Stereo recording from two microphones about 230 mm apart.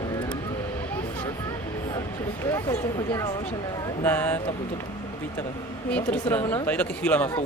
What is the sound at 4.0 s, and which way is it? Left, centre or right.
Speech, centre.